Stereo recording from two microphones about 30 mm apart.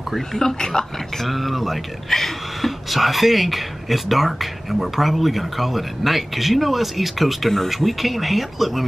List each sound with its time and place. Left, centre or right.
0.3 s speech: centre
1.2 s speech: centre